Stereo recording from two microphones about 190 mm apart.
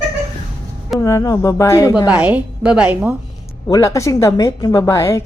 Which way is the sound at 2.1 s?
10° right (ahead or behind).